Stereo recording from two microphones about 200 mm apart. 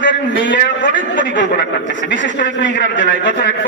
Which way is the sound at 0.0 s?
65° left (ahead or behind).